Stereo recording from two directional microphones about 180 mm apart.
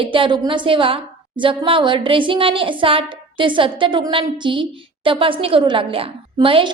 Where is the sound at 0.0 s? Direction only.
30° right (ahead or behind).